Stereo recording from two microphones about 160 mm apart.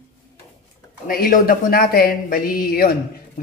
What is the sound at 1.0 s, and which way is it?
Speech, 65° left (ahead or behind).